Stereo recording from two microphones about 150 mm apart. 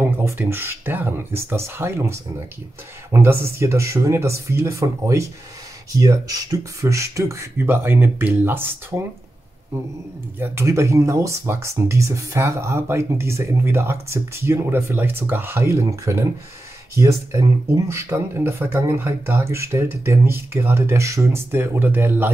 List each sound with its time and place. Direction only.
0.0 s speech: 15° right (ahead or behind)
10.4 s speech: 15° right (ahead or behind)